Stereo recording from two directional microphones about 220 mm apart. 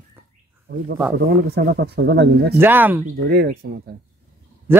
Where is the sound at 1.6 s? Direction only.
50° right (ahead or behind).